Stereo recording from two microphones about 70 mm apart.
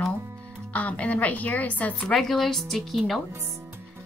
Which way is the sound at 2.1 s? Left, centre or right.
Centre.